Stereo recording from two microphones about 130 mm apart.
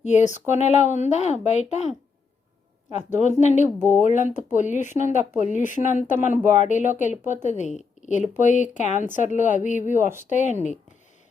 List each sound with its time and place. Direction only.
0.0 s speech: 65° left (ahead or behind)
2.9 s speech: 65° left (ahead or behind)
3.8 s speech: 15° right (ahead or behind)
4.0 s a woman's voice: 70° left (ahead or behind)